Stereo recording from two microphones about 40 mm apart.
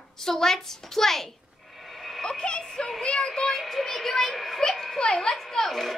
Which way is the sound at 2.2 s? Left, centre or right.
Left.